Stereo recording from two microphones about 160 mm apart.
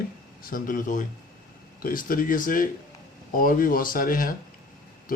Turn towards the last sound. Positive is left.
turn(degrees=60)  # may be behind; listen again after turning